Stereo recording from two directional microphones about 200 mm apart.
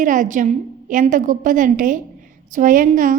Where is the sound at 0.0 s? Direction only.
40° right (ahead or behind).